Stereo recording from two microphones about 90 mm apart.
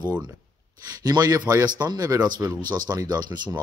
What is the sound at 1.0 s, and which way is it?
Speech, 45° right (ahead or behind).